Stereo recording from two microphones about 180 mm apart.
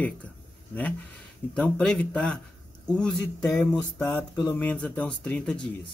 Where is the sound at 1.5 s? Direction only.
5° left (ahead or behind).